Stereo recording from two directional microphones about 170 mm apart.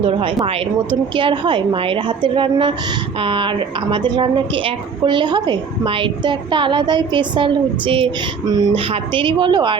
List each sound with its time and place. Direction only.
0.0 s a woman's voice: 30° right (ahead or behind)